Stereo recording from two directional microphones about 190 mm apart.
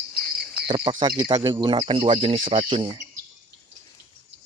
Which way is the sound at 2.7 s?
25° right (ahead or behind).